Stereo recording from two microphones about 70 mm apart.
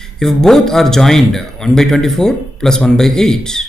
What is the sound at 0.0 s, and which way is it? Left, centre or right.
Speech, centre.